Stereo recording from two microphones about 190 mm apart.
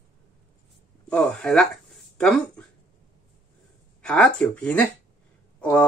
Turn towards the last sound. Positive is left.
turn(degrees=5)  # may be behind; listen again after turning